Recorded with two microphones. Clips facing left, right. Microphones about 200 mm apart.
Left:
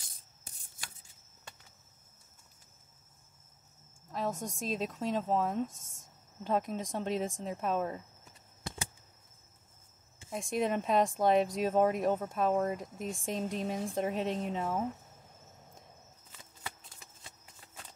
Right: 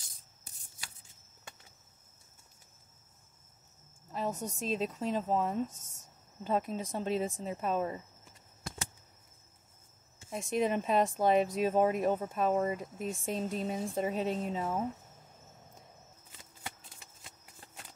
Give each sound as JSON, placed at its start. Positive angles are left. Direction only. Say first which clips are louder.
{"t": 4.1, "sound": "speech", "louder": "even", "side_deg": -5}
{"t": 10.3, "sound": "speech", "louder": "right 1 dB", "side_deg": -5}